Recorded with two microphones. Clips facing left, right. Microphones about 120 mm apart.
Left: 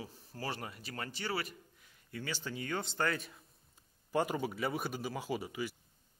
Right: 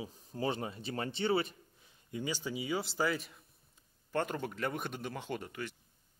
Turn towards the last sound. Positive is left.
turn(degrees=5)  # may be behind; listen again after turning